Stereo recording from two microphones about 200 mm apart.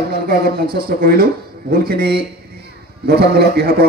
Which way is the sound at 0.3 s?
50° right (ahead or behind).